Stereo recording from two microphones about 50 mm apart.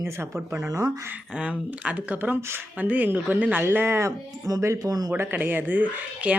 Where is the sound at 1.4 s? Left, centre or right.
Right.